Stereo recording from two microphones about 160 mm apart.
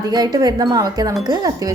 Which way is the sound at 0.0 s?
25° right (ahead or behind).